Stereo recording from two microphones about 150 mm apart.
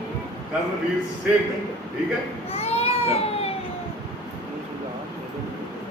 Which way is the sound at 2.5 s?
40° left (ahead or behind).